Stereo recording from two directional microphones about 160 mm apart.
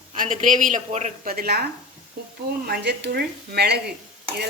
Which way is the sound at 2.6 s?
85° right.